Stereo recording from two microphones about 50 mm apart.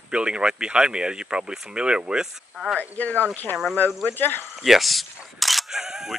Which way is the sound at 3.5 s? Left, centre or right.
Left.